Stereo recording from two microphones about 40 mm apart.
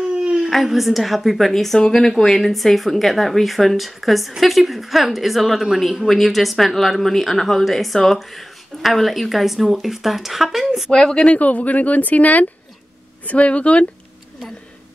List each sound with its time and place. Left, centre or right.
0.1 s a sound: right
0.4 s speech: centre
10.9 s speech: centre
11.3 s speech: left
13.3 s speech: left